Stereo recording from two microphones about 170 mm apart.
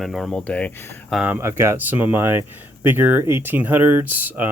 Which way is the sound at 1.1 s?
5° right (ahead or behind).